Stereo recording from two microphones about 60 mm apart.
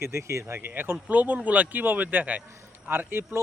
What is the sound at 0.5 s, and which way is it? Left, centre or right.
Speech, right.